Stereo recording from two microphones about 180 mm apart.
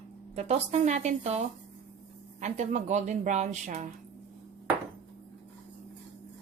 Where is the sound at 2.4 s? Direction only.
40° right (ahead or behind).